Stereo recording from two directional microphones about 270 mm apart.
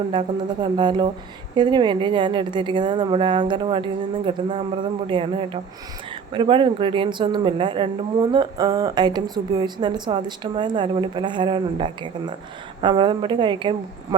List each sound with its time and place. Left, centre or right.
0.1 s a woman's voice: centre